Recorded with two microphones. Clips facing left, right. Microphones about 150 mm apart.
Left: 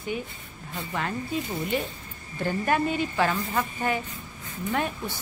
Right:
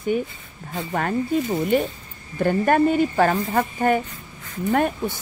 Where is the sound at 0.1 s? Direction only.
45° right (ahead or behind).